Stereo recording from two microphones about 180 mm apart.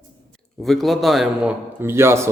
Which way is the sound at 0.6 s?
Centre (ahead or behind).